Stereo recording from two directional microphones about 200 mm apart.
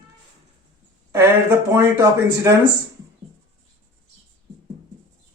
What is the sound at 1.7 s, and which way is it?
Speech, 15° right (ahead or behind).